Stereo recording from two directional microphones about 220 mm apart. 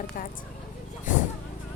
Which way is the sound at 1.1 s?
35° left (ahead or behind).